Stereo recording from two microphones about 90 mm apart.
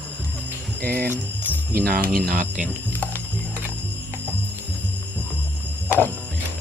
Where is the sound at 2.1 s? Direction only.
15° left (ahead or behind).